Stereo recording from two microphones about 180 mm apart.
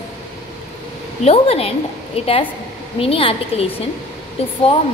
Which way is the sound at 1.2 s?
35° left (ahead or behind).